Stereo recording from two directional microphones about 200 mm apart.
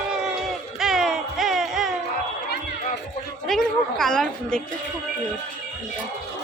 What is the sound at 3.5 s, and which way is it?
A woman's voice, centre (ahead or behind).